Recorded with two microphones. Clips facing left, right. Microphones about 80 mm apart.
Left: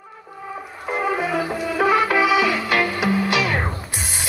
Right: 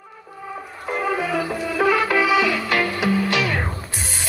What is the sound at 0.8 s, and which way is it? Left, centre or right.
Music, centre.